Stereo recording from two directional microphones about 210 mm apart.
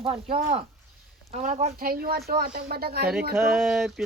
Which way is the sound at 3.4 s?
Centre (ahead or behind).